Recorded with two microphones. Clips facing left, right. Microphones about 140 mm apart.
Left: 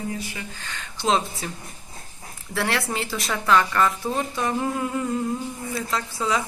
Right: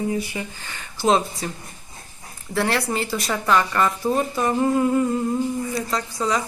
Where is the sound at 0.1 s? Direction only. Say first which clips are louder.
Right 6 dB; 15° right (ahead or behind).